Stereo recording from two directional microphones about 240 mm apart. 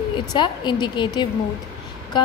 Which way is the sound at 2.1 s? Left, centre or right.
Centre.